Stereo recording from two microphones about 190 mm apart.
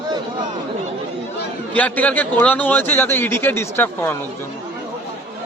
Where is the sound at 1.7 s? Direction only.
5° left (ahead or behind).